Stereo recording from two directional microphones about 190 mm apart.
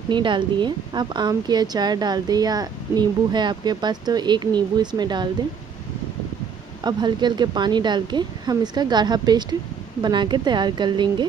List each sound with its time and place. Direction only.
0.1 s a woman's voice: 25° right (ahead or behind)
6.8 s a woman's voice: 20° right (ahead or behind)